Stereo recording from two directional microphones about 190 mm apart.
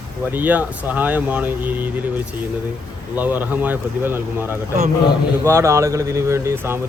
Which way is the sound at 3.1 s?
10° right (ahead or behind).